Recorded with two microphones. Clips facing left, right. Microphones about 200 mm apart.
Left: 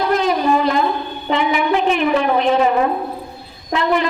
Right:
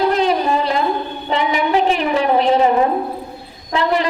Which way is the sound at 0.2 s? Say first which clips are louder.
Even; 30° right (ahead or behind).